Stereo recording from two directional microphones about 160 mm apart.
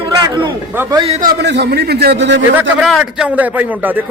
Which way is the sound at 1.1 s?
50° right (ahead or behind).